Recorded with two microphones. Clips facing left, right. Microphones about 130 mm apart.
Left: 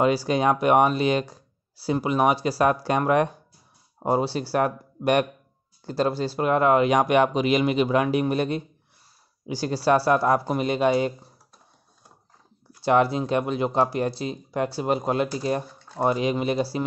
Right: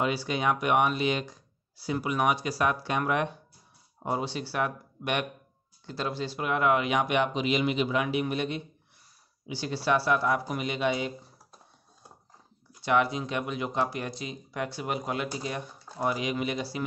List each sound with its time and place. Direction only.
0.0 s speech: 40° left (ahead or behind)
12.8 s speech: 35° left (ahead or behind)